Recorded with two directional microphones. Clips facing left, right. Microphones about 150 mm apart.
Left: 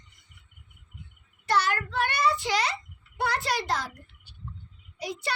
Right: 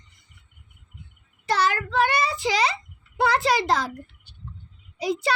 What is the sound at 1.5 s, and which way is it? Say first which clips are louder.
Child singing: right 3 dB; 90° right.